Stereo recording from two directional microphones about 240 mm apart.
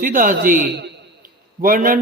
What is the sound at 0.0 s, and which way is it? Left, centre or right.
A man's voice, right.